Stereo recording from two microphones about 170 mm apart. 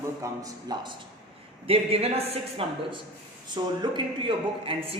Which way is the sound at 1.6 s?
35° right (ahead or behind).